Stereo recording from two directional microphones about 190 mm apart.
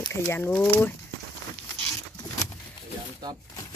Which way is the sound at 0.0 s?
15° left (ahead or behind).